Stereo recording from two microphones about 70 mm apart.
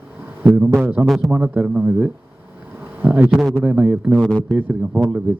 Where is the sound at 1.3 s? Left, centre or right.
Right.